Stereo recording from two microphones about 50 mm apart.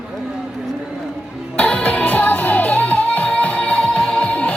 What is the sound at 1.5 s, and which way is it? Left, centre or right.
Music, left.